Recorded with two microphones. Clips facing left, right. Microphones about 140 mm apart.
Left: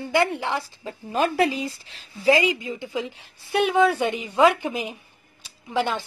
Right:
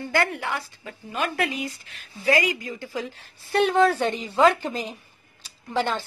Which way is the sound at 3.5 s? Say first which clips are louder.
Even; 5° left (ahead or behind).